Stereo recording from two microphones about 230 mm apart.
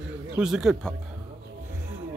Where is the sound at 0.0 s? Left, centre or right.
Centre.